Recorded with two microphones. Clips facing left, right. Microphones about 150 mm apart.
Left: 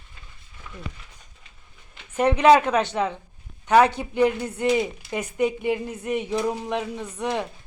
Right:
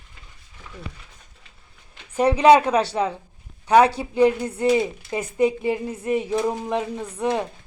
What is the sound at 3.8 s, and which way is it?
Speech, 30° right (ahead or behind).